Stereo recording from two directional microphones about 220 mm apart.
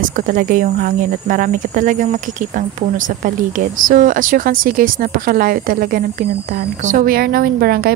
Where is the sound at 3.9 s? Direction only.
35° right (ahead or behind).